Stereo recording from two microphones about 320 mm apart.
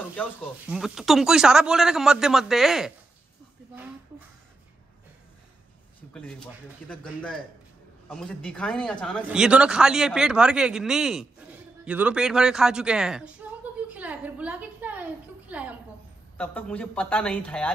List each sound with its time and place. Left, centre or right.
0.1 s speech: centre
6.1 s speech: centre